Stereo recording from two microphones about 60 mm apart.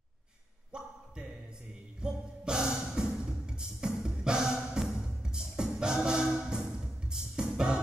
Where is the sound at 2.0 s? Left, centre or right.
Centre.